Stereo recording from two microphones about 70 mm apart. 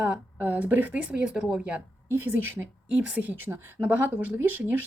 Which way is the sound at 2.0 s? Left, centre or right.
Right.